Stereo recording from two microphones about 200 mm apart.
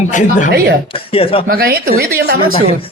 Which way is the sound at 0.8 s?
25° left (ahead or behind).